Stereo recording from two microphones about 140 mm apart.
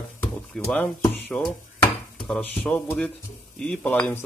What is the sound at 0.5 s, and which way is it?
Speech, 10° left (ahead or behind).